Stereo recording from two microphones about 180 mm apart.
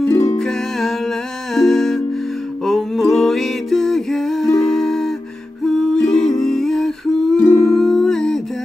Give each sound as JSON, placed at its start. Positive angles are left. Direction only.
{"t": 0.1, "sound": "music", "side_deg": 15}
{"t": 0.4, "sound": "music", "side_deg": 0}
{"t": 5.7, "sound": "humming", "side_deg": 0}